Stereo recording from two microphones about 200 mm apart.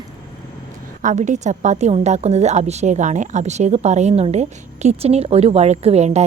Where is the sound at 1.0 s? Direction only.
40° right (ahead or behind).